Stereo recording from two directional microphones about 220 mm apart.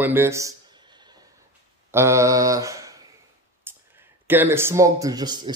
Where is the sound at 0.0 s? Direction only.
10° right (ahead or behind).